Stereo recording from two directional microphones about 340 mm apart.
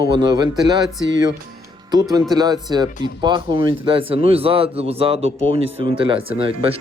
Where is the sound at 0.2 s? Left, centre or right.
Centre.